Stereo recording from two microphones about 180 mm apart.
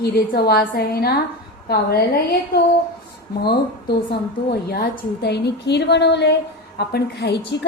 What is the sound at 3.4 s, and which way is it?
A woman's voice, 65° left (ahead or behind).